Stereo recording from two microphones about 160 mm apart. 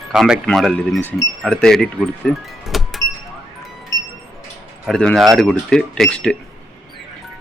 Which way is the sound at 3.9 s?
20° left (ahead or behind).